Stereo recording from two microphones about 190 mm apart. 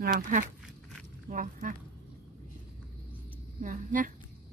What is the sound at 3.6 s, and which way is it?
Speech, 45° right (ahead or behind).